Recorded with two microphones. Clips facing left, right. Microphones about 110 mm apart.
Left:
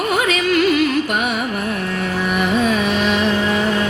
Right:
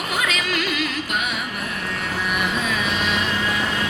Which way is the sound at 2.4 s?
45° left (ahead or behind).